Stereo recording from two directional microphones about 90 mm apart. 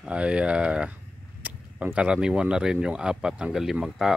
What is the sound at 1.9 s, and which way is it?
Speech, 10° right (ahead or behind).